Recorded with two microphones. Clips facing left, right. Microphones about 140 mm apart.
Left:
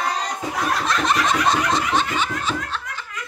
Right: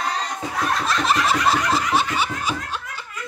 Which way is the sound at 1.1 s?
5° right (ahead or behind).